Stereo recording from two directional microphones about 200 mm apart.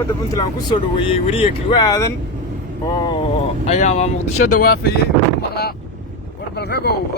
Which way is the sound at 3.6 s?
35° left (ahead or behind).